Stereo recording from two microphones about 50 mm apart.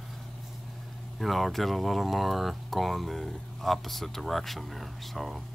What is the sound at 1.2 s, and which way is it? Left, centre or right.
Speech, centre.